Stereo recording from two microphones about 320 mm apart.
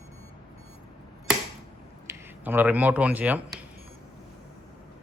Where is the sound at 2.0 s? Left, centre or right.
Centre.